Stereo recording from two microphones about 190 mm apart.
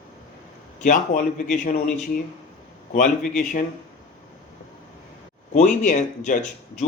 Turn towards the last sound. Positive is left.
turn(degrees=40)  # may be behind; listen again after turning